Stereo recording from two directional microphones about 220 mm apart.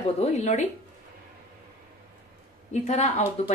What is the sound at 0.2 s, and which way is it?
Speech, 30° left (ahead or behind).